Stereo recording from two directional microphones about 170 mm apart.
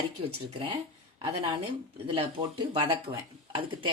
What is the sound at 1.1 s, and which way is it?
Speech, 35° right (ahead or behind).